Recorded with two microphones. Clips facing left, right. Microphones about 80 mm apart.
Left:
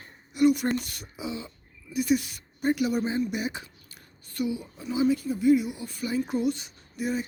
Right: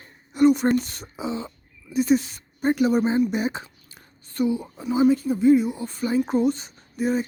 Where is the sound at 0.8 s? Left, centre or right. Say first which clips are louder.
Right 5 dB; right.